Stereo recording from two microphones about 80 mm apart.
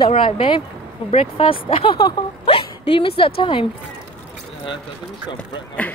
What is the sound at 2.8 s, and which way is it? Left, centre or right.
Speech, left.